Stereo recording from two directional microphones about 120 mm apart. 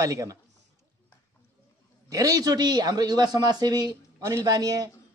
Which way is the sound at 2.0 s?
30° right (ahead or behind).